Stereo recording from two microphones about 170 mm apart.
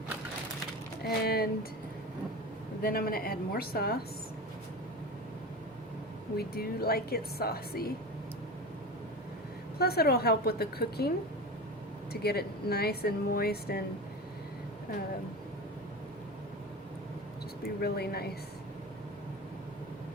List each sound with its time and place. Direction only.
1.2 s speech: 65° left (ahead or behind)
2.8 s a woman's voice: 60° left (ahead or behind)
6.3 s a woman's voice: 65° left (ahead or behind)
9.7 s speech: 65° left (ahead or behind)
12.2 s speech: 70° left (ahead or behind)
17.6 s speech: 65° left (ahead or behind)